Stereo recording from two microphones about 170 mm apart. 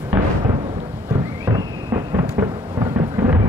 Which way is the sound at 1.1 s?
20° right (ahead or behind).